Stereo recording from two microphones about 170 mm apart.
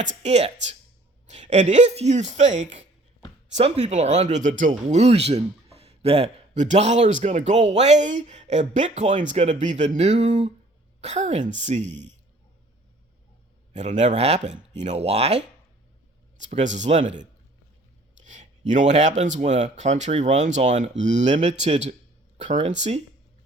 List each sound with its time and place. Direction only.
0.2 s a man's voice: 40° right (ahead or behind)
13.7 s a man's voice: 45° right (ahead or behind)
16.4 s a man's voice: 45° right (ahead or behind)
18.2 s a sound: 45° right (ahead or behind)
19.4 s a man's voice: 45° right (ahead or behind)